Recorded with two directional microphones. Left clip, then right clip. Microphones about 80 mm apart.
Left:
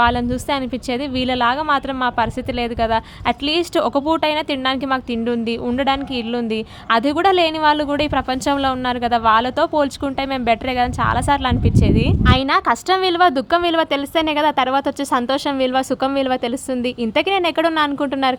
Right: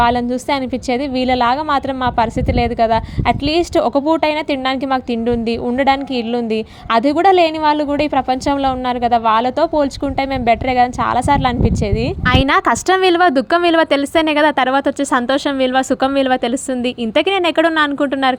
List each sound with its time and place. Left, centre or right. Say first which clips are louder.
0.0 s a woman's voice: right 2 dB; right
12.2 s a woman's voice: right 4 dB; right
13.0 s a woman's voice: right 3 dB; right